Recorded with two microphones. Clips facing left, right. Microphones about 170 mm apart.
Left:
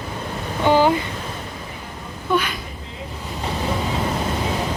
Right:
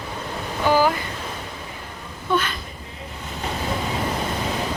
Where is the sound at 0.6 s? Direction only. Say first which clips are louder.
Left 3 dB; 25° left (ahead or behind).